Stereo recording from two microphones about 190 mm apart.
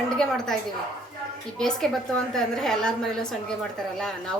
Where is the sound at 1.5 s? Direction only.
Centre (ahead or behind).